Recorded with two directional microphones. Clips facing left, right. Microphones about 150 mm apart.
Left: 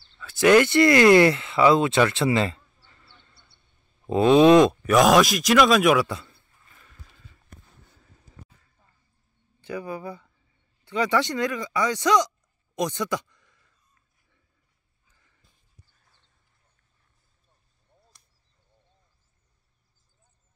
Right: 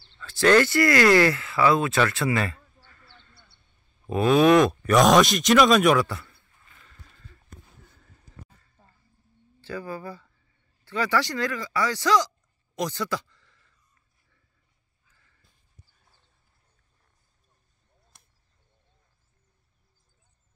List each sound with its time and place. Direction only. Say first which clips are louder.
0.2 s speech: left 2 dB; 10° left (ahead or behind)
4.8 s speech: even; 5° left (ahead or behind)
6.0 s a man's voice: left 2 dB; 20° left (ahead or behind)
6.8 s rowboat: even; 5° left (ahead or behind)
9.6 s speech: left 2 dB; 15° left (ahead or behind)
12.7 s a sound: left 2 dB; 20° left (ahead or behind)